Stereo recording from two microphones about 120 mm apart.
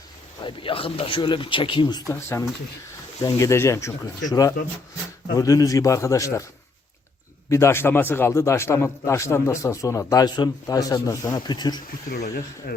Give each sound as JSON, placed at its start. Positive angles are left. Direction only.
{"t": 0.4, "sound": "speech", "side_deg": 50}
{"t": 2.0, "sound": "a man's voice", "side_deg": 25}
{"t": 7.5, "sound": "a man's voice", "side_deg": 20}